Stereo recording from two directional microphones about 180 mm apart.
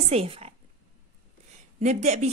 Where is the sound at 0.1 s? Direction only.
35° right (ahead or behind).